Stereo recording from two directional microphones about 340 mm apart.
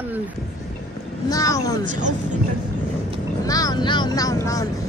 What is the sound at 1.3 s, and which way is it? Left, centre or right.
Speech, centre.